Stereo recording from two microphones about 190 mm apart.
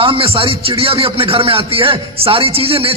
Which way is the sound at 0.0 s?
30° right (ahead or behind).